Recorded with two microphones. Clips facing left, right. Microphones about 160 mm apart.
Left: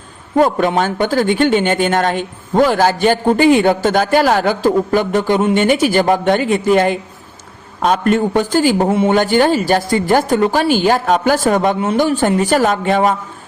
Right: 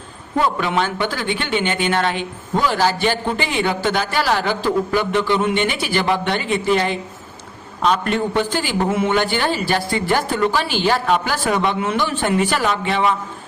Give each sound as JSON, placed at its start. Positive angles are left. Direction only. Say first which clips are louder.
{"t": 0.3, "sound": "speech", "louder": "left 6 dB", "side_deg": 45}